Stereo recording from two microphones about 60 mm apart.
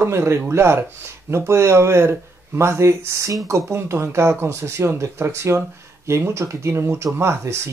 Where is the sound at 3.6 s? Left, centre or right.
Right.